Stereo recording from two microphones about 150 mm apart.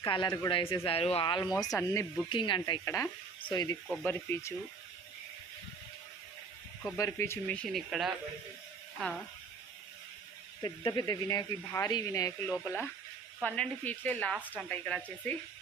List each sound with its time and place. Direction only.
0.0 s speech: 30° left (ahead or behind)
2.3 s speech: 35° left (ahead or behind)
2.8 s speech: 20° left (ahead or behind)
4.0 s speech: 15° left (ahead or behind)
6.9 s speech: 20° left (ahead or behind)
7.4 s speech: 5° left (ahead or behind)
10.6 s speech: 30° left (ahead or behind)
12.5 s speech: 10° left (ahead or behind)
14.3 s speech: 10° right (ahead or behind)
14.6 s speech: 5° left (ahead or behind)